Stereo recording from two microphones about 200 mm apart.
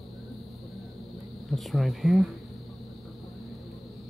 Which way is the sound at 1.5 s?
Centre (ahead or behind).